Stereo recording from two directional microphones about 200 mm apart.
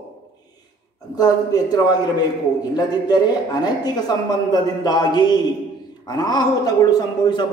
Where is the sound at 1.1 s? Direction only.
20° left (ahead or behind).